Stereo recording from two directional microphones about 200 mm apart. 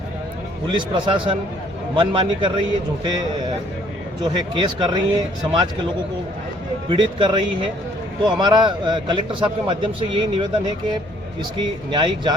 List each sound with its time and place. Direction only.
0.7 s a man's voice: 25° right (ahead or behind)
4.2 s a man's voice: 20° right (ahead or behind)
6.9 s a man's voice: 25° right (ahead or behind)